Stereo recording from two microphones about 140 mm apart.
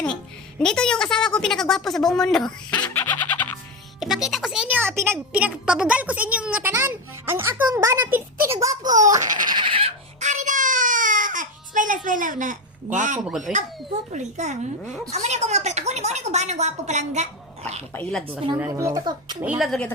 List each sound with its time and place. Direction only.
0.6 s speech: 5° left (ahead or behind)
2.9 s music: 15° left (ahead or behind)
4.0 s speech: centre (ahead or behind); by 8.2 s 20° right (ahead or behind)
8.6 s a sound: 25° right (ahead or behind)
9.2 s fowl: 65° right (ahead or behind)
9.5 s a sound: 35° right (ahead or behind)
10.2 s baby cry: 60° right (ahead or behind)
13.4 s speech: 60° right (ahead or behind)
17.9 s a woman's voice: 5° left (ahead or behind)
18.5 s speech: 20° right (ahead or behind)
19.4 s speech: 5° right (ahead or behind)